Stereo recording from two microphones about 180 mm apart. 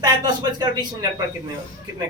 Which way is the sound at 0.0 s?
20° right (ahead or behind).